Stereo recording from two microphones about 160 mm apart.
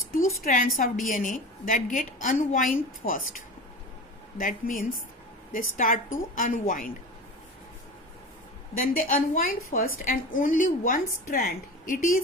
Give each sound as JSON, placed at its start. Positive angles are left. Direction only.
{"t": 0.1, "sound": "a woman's voice", "side_deg": 60}
{"t": 8.8, "sound": "a woman's voice", "side_deg": 60}